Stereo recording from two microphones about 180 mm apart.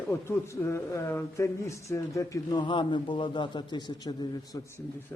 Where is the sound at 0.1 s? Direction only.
15° left (ahead or behind).